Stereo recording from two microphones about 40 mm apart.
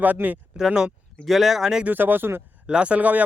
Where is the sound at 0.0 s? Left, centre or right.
Right.